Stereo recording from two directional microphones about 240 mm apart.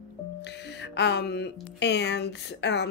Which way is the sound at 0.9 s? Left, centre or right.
Left.